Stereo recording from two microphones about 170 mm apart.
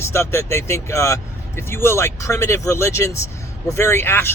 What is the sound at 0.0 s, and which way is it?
Speech, 15° left (ahead or behind).